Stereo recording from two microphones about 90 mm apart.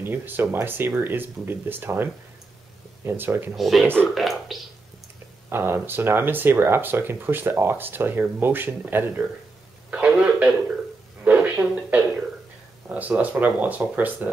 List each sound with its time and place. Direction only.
0.0 s speech: 25° right (ahead or behind)
3.5 s speech: centre (ahead or behind)
4.1 s a sound: centre (ahead or behind)
5.5 s speech: 25° right (ahead or behind)
9.8 s a sound: 15° right (ahead or behind)
12.8 s speech: 15° right (ahead or behind)